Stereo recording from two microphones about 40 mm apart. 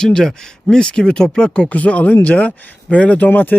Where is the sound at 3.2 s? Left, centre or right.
Left.